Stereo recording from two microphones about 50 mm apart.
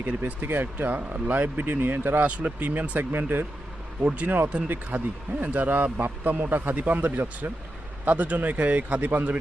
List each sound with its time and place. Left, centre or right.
0.4 s speech: right
2.2 s speech: right
3.0 s speech: right
4.0 s speech: right